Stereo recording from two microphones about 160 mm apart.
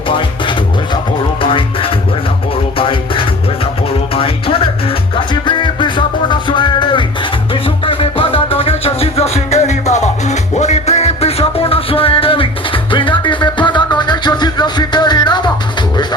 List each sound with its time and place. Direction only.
1.4 s music: 35° left (ahead or behind)